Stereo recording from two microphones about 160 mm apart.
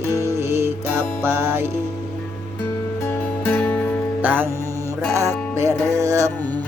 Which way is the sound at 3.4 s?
10° left (ahead or behind).